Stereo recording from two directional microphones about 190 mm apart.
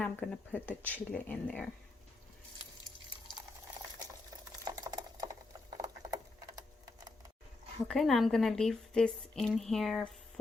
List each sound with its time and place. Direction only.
0.0 s speech: 5° left (ahead or behind)
4.6 s a sound: 20° right (ahead or behind)
7.9 s a woman's voice: centre (ahead or behind)